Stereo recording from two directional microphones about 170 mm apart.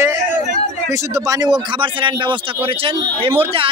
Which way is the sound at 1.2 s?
20° right (ahead or behind).